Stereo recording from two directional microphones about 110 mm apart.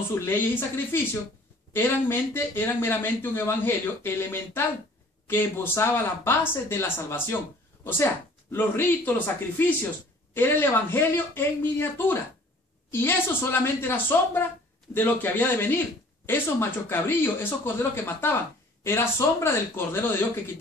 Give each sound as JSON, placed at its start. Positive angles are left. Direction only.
{"t": 0.1, "sound": "speech", "side_deg": 20}